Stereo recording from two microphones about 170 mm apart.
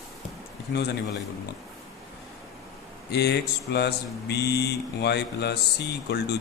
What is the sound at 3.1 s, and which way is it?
Mantra, 75° left (ahead or behind).